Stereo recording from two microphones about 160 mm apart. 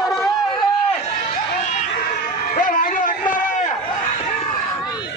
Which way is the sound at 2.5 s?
55° left (ahead or behind).